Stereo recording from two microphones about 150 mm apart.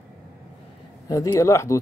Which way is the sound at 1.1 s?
20° left (ahead or behind).